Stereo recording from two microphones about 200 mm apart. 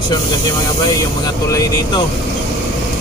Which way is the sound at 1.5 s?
15° left (ahead or behind).